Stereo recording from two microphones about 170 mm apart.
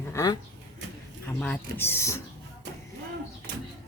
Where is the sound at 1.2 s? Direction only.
10° left (ahead or behind).